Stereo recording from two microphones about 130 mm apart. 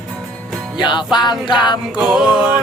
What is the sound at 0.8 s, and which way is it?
Music, 35° left (ahead or behind).